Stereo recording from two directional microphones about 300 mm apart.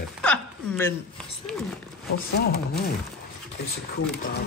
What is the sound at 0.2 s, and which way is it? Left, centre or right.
Hiccup, centre.